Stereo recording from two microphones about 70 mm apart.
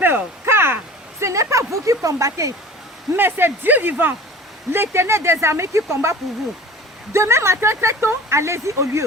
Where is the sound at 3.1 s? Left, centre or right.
Right.